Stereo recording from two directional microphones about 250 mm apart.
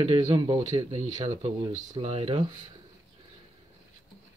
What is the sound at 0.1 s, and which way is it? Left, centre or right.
Speech, right.